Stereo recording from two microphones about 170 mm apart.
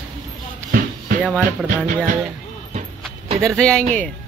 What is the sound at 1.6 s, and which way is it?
Music, 50° right (ahead or behind).